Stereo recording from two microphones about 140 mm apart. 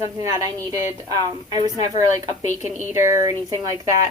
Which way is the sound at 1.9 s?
55° left (ahead or behind).